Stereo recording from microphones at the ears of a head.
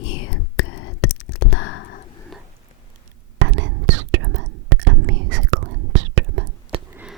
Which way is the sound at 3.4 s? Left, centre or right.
Right.